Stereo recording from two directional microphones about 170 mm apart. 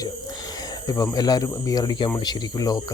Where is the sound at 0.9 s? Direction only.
20° left (ahead or behind).